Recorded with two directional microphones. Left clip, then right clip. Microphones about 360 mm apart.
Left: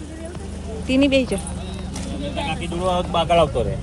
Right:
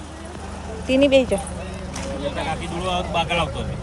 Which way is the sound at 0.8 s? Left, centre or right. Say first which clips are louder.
Right 2 dB; centre.